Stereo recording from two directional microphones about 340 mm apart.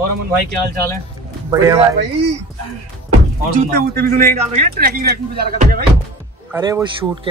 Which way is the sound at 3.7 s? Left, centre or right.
Right.